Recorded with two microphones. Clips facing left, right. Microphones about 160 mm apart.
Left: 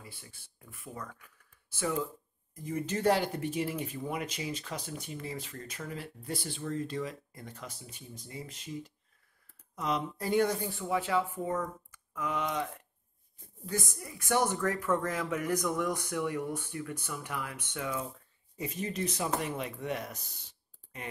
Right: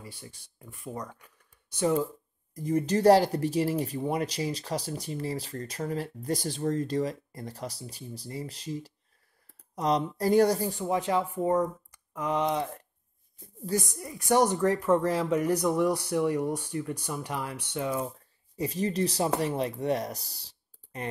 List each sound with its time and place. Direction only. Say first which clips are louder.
0.2 s speech: right 7 dB; 30° right (ahead or behind)
13.9 s speech: right 6 dB; 35° right (ahead or behind)